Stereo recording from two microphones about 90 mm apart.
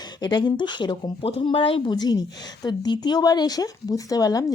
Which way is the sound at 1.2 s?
80° left.